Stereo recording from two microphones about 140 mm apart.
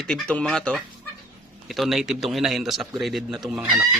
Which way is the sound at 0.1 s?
5° left (ahead or behind).